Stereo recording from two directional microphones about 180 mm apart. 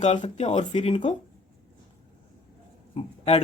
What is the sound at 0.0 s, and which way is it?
Speech, 35° left (ahead or behind).